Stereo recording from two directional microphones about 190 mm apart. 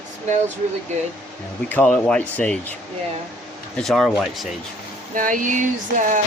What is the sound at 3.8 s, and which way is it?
Speech, centre (ahead or behind).